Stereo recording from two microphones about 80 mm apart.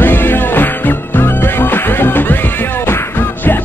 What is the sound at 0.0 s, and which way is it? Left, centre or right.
Music, left.